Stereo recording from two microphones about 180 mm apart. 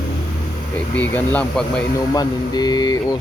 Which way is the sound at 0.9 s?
10° left (ahead or behind).